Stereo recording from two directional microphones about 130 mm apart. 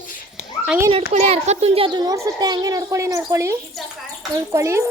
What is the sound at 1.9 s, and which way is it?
A child's voice, 30° right (ahead or behind).